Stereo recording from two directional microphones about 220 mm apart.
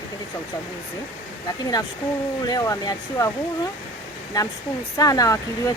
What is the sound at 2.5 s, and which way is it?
Speech, 15° left (ahead or behind).